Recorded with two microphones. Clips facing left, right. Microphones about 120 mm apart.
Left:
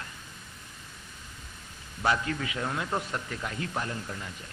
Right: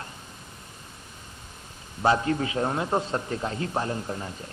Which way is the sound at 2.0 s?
30° right (ahead or behind).